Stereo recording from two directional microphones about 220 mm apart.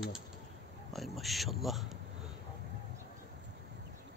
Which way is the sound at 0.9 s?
Centre (ahead or behind).